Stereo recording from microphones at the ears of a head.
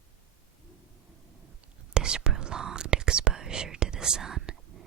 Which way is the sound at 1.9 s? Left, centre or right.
Right.